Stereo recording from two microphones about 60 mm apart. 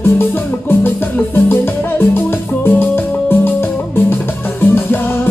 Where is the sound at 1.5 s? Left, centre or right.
Left.